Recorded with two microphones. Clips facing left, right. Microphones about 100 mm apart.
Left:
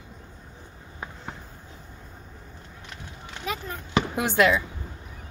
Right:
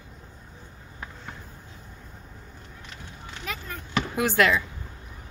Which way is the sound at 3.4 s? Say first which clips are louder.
Left 4 dB; 20° left (ahead or behind).